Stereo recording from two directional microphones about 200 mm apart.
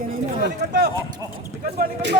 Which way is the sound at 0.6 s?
55° right (ahead or behind).